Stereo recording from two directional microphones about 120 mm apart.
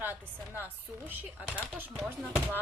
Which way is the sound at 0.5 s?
15° right (ahead or behind).